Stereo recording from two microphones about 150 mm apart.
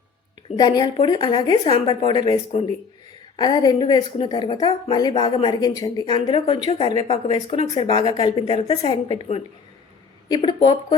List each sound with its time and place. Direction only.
0.5 s a woman's voice: 25° left (ahead or behind)
1.6 s a woman's voice: 40° left (ahead or behind)
3.3 s a woman's voice: 25° left (ahead or behind)
8.4 s a woman's voice: 45° left (ahead or behind)
10.2 s a woman's voice: 30° left (ahead or behind)